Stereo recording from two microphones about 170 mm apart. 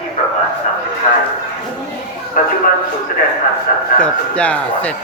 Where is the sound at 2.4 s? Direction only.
50° left (ahead or behind).